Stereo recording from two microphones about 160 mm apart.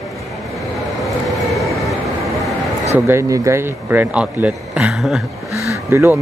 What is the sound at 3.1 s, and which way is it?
A man's voice, 20° right (ahead or behind).